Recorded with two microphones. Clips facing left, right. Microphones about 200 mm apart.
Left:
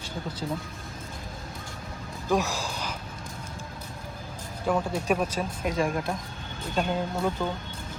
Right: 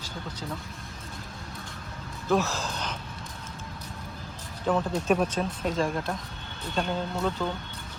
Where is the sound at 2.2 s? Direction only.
15° left (ahead or behind).